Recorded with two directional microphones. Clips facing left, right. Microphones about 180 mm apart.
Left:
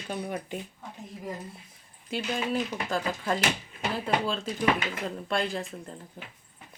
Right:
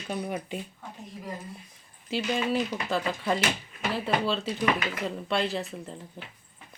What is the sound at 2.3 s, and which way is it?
Speech, centre (ahead or behind).